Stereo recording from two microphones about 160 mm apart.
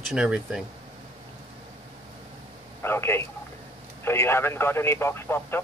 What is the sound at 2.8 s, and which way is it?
Speech, 15° left (ahead or behind).